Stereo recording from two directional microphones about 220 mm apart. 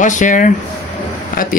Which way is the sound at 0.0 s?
35° left (ahead or behind).